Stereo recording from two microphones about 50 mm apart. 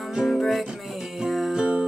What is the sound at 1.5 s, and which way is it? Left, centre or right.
Music, right.